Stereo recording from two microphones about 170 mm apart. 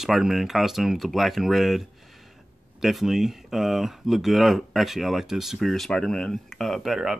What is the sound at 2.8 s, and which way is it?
Speech, centre (ahead or behind).